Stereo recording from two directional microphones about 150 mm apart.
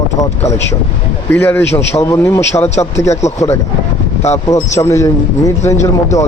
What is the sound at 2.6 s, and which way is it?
Speech, 45° left (ahead or behind).